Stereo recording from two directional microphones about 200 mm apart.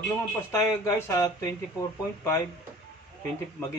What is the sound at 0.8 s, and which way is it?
Speech, 15° left (ahead or behind).